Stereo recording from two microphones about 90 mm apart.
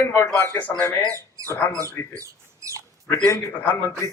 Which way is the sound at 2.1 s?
35° right (ahead or behind).